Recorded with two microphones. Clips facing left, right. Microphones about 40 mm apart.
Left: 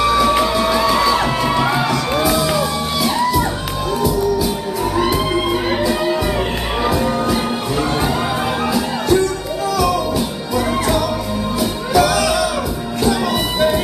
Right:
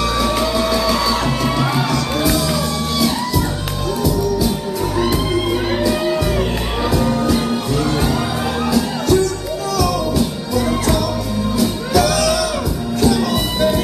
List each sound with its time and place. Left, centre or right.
0.0 s music: centre
4.9 s music: centre
8.7 s music: centre